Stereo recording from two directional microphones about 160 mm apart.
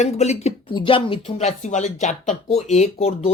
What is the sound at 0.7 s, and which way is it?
Speech, 30° left (ahead or behind).